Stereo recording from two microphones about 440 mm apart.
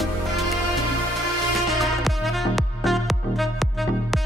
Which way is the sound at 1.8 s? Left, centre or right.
Centre.